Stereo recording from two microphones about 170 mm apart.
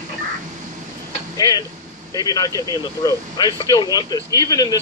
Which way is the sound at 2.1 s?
20° left (ahead or behind).